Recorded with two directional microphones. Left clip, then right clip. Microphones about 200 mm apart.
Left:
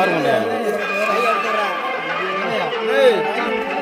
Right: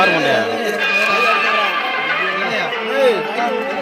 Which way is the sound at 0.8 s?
60° left (ahead or behind).